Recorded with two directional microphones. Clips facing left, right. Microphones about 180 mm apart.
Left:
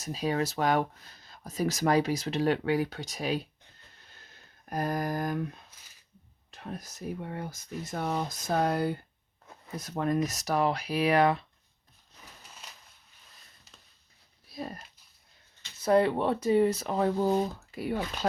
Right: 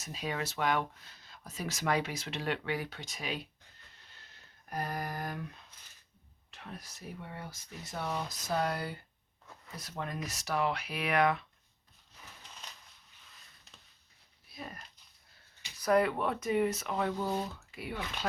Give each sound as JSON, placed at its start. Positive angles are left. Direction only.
{"t": 0.0, "sound": "speech", "side_deg": 35}
{"t": 4.7, "sound": "speech", "side_deg": 45}
{"t": 6.5, "sound": "speech", "side_deg": 40}
{"t": 12.2, "sound": "a sound", "side_deg": 10}
{"t": 14.5, "sound": "a sound", "side_deg": 35}
{"t": 15.8, "sound": "speech", "side_deg": 30}